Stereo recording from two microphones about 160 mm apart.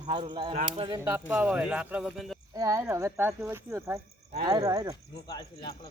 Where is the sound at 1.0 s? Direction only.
10° right (ahead or behind).